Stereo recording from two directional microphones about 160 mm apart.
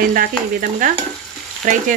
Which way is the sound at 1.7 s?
55° right (ahead or behind).